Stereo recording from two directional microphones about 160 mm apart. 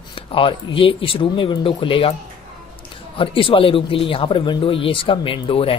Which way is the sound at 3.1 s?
35° left (ahead or behind).